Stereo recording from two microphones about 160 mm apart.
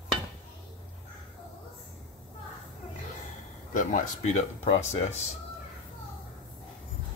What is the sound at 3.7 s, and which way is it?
Speech, 55° left (ahead or behind).